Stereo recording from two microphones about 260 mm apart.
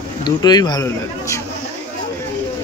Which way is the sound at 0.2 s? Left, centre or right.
Centre.